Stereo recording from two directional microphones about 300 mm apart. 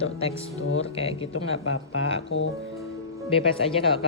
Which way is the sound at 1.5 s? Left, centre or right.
Left.